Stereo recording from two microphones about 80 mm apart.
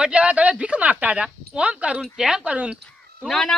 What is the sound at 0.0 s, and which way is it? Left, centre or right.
A woman's voice, centre.